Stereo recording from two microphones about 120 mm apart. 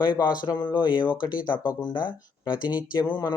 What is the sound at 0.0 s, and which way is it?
Speech, 35° left (ahead or behind).